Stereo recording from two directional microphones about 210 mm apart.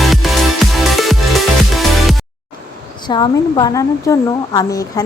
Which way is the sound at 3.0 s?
20° left (ahead or behind).